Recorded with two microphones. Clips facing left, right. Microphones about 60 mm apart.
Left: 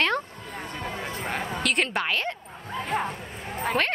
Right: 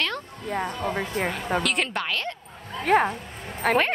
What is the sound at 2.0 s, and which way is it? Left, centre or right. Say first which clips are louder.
Speech: left 1 dB; centre.